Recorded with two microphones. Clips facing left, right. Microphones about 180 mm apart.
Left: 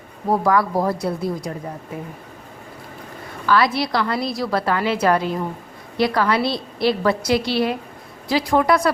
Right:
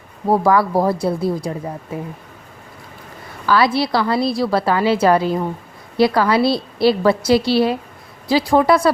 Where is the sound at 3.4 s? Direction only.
30° right (ahead or behind).